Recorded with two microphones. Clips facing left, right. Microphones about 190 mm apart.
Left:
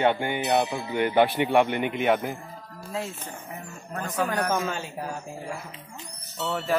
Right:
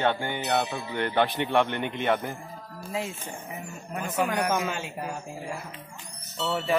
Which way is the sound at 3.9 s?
10° right (ahead or behind).